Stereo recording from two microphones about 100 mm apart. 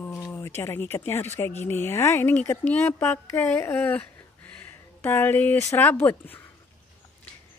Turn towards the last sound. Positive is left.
turn(degrees=20)  # may be behind; listen again after turning